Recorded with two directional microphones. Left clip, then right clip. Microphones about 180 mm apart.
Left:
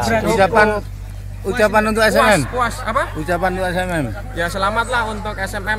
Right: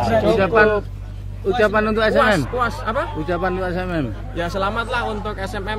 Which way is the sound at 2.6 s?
5° right (ahead or behind).